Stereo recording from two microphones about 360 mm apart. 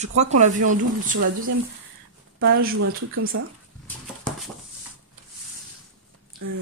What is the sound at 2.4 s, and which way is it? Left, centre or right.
Speech, right.